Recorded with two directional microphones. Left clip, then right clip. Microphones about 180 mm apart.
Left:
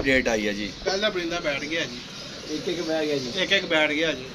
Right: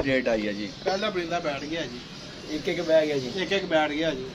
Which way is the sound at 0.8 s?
45° right (ahead or behind).